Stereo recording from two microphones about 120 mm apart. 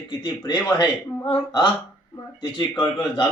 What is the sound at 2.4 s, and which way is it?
Speech, 40° left (ahead or behind).